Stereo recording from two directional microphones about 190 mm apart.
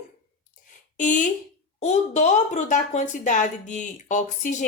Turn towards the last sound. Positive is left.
turn(degrees=40)  # may be behind; listen again after turning